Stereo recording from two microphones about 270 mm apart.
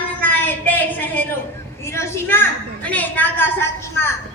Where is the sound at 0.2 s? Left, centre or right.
Centre.